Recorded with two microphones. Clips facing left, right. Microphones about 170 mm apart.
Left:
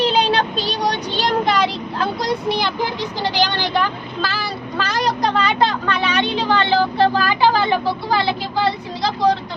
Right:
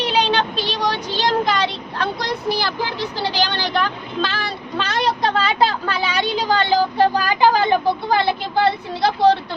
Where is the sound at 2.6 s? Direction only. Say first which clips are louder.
Left 2 dB; 15° left (ahead or behind).